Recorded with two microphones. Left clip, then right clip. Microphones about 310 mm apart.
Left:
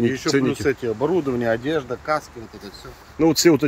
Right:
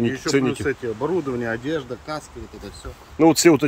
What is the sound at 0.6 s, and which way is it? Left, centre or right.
Speech, left.